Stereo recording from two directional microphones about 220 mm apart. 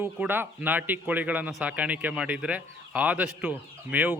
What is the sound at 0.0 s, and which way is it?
A man's voice, 10° right (ahead or behind).